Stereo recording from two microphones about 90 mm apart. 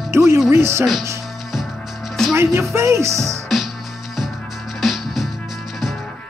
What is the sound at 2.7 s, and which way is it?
Speech, 30° right (ahead or behind).